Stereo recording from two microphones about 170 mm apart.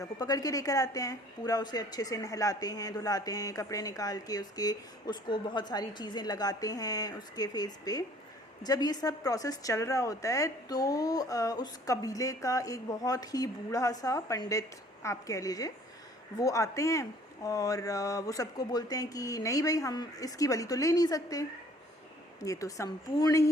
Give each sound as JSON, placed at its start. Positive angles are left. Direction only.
{"t": 0.0, "sound": "a woman's voice", "side_deg": 20}